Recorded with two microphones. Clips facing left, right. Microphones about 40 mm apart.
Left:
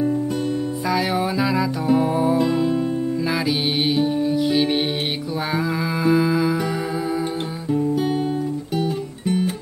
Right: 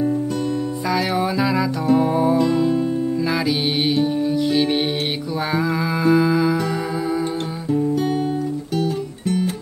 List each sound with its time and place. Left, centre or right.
0.8 s music: centre
7.7 s music: centre